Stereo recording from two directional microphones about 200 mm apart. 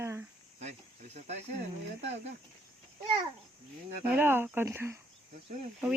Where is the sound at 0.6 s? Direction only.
35° right (ahead or behind).